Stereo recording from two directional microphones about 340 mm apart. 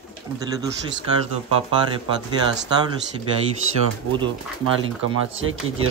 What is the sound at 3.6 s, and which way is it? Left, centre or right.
Speech, right.